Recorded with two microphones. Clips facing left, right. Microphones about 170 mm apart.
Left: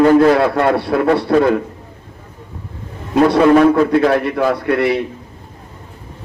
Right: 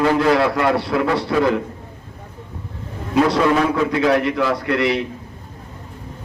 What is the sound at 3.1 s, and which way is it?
A man's voice, 50° left (ahead or behind).